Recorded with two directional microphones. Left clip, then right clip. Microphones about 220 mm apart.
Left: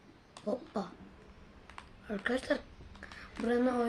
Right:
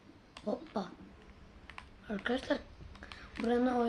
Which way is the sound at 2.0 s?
15° left (ahead or behind).